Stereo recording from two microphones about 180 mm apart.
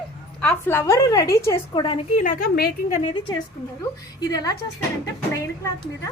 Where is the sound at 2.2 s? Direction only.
50° left (ahead or behind).